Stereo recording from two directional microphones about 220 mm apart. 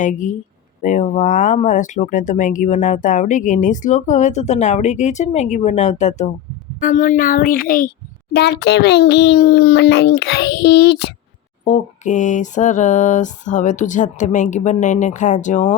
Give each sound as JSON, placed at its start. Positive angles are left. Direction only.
{"t": 0.0, "sound": "a child's voice", "side_deg": 35}
{"t": 11.6, "sound": "speech", "side_deg": 35}